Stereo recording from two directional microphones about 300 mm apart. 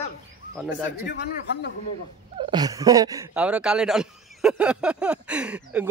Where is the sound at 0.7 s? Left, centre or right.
Left.